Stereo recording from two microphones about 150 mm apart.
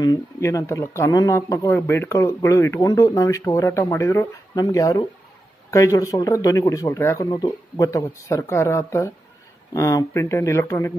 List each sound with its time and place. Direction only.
0.0 s speech: 20° left (ahead or behind)